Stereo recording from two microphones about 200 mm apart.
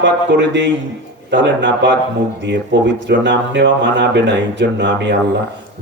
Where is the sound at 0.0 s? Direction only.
60° right (ahead or behind).